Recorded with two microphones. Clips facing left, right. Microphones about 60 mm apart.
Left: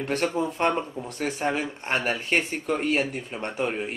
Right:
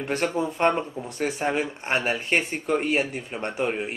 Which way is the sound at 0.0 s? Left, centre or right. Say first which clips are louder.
Even; centre.